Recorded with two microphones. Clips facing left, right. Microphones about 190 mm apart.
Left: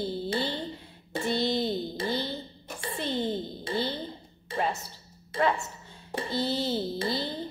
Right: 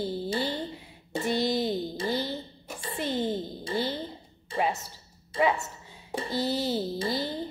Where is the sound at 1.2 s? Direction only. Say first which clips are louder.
Right 1 dB; 10° right (ahead or behind).